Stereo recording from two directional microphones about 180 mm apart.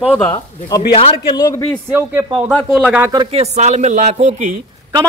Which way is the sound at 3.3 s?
35° right (ahead or behind).